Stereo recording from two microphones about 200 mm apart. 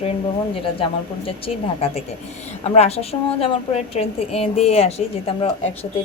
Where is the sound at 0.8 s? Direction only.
30° left (ahead or behind).